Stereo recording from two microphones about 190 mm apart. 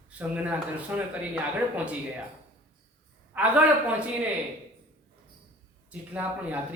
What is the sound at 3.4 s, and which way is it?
Speech, 5° right (ahead or behind).